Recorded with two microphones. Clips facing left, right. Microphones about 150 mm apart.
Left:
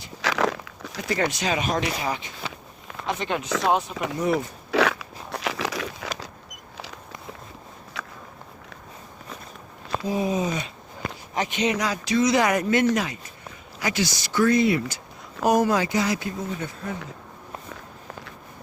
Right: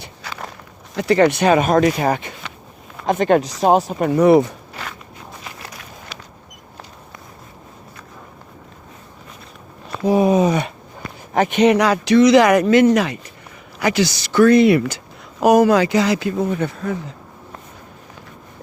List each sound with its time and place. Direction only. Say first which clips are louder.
0.2 s biting: left 10 dB; 90° left
0.9 s speech: right 11 dB; 70° right (ahead or behind); by 3.5 s 50° right (ahead or behind)
3.7 s speech: right 9 dB; 40° right (ahead or behind)
4.1 s speech: right 13 dB; 75° right (ahead or behind)
4.7 s biting: left 12 dB; 85° left
8.0 s walk: left 5 dB; 90° left
10.0 s a sound: right 11 dB; 70° right (ahead or behind)
11.3 s speech: right 11 dB; 60° right (ahead or behind)